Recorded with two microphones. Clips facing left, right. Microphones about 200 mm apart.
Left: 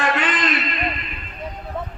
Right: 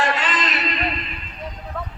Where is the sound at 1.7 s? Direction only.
20° left (ahead or behind).